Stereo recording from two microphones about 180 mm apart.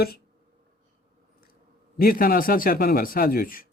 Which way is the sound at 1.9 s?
55° left (ahead or behind).